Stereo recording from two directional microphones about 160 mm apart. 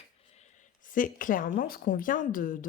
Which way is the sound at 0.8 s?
55° left (ahead or behind).